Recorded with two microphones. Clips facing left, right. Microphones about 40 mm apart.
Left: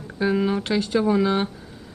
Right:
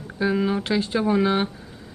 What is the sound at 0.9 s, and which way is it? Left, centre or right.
Speech, centre.